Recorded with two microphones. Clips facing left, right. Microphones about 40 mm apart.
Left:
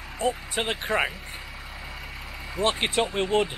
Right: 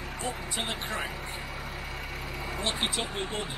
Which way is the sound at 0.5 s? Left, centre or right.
Left.